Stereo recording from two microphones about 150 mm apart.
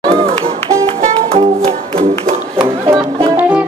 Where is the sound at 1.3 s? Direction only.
40° right (ahead or behind).